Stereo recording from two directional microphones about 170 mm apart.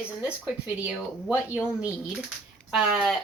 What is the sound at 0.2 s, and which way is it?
Speech, 5° right (ahead or behind).